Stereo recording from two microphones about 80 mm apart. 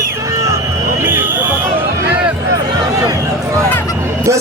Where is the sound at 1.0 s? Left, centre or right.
Right.